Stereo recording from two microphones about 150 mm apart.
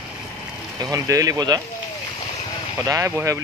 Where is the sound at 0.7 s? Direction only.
20° right (ahead or behind).